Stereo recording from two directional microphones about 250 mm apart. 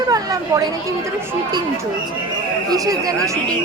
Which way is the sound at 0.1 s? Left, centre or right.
Centre.